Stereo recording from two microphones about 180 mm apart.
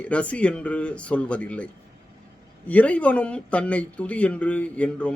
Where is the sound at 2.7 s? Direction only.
10° left (ahead or behind).